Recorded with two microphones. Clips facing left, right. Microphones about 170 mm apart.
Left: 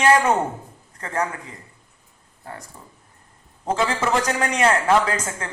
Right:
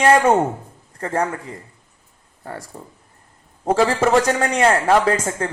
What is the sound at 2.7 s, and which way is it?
Speech, 45° right (ahead or behind).